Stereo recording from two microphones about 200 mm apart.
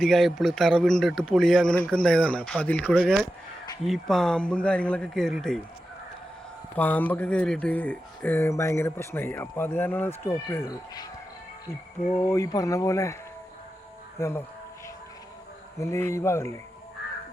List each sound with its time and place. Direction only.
0.0 s a man's voice: centre (ahead or behind)
3.0 s a man's voice: 5° right (ahead or behind)
6.7 s speech: 10° left (ahead or behind)
12.1 s speech: 15° left (ahead or behind)
14.2 s speech: 15° left (ahead or behind)
15.8 s speech: 15° left (ahead or behind)